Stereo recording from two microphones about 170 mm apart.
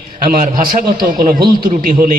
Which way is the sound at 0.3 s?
55° right (ahead or behind).